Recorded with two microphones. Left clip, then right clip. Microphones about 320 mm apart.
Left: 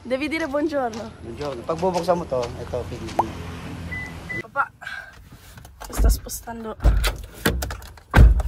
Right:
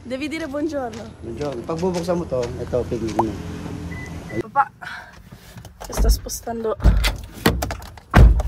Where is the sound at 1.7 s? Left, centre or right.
Centre.